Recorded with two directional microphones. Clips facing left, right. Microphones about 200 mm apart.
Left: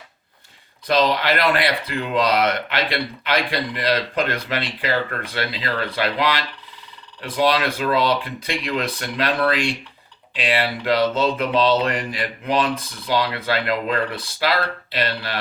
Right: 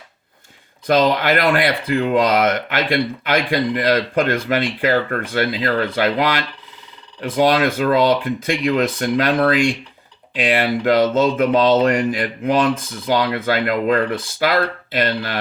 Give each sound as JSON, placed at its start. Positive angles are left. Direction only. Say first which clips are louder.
{"t": 0.9, "sound": "speech", "louder": "right 3 dB", "side_deg": -50}